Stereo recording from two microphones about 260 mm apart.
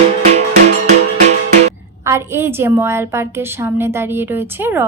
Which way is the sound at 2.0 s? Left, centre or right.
Centre.